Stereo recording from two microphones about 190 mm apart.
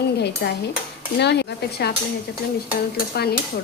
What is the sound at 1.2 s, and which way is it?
Speech, 60° left (ahead or behind).